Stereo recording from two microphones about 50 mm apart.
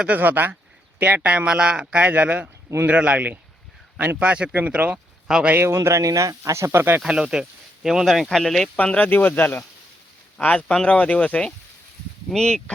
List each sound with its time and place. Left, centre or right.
0.1 s speech: right
1.2 s speech: right
5.5 s speech: right
7.1 s speech: centre
8.7 s speech: left
10.4 s speech: left
12.3 s speech: centre